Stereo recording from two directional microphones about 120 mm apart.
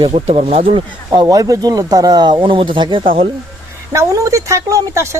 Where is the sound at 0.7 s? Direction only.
40° right (ahead or behind).